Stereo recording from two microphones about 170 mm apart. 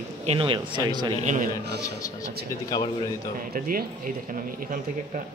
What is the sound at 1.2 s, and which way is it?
Speech, 45° right (ahead or behind).